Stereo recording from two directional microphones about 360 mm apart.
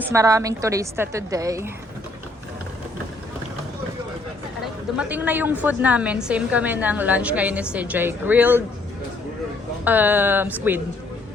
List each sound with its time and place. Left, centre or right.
0.1 s a woman's voice: centre
4.9 s a woman's voice: centre
9.8 s a woman's voice: centre